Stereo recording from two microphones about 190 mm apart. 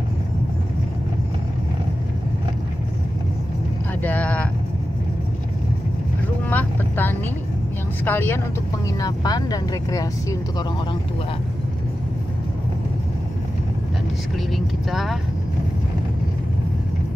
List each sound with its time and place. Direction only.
4.0 s vehicle: 10° left (ahead or behind)
6.5 s vehicle: 10° left (ahead or behind)
8.0 s speech: 10° left (ahead or behind)
14.9 s speech: centre (ahead or behind)